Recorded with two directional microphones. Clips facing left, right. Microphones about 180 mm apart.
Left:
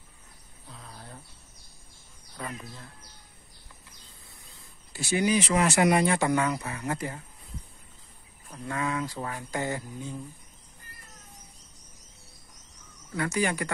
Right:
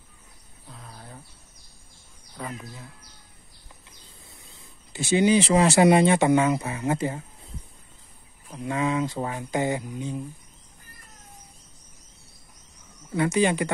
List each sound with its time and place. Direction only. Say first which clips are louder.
0.7 s a sound: right 1 dB; centre (ahead or behind)
2.5 s speech: right 3 dB; 5° right (ahead or behind)
4.9 s speech: right 5 dB; 25° right (ahead or behind)
8.5 s speech: right 5 dB; 20° right (ahead or behind)
13.1 s speech: right 6 dB; 20° right (ahead or behind)